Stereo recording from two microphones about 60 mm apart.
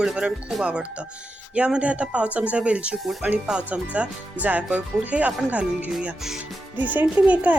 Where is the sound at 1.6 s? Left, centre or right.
Centre.